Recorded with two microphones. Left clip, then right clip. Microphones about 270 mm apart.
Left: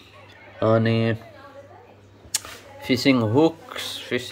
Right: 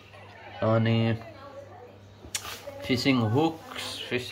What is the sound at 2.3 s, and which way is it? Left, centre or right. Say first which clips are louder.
Speech: left 4 dB; centre.